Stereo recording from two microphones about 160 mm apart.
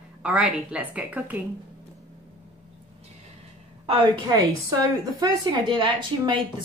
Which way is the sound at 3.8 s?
30° right (ahead or behind).